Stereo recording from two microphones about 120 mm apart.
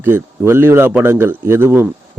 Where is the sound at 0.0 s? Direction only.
20° right (ahead or behind).